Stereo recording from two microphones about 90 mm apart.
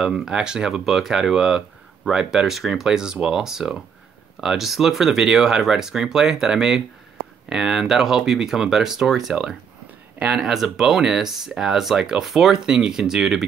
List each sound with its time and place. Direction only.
0.0 s speech: 5° right (ahead or behind)
10.1 s speech: 15° right (ahead or behind)
10.4 s speech: 5° right (ahead or behind)